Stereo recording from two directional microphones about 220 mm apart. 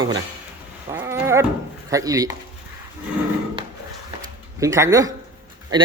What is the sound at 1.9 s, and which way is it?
Speech, 15° right (ahead or behind).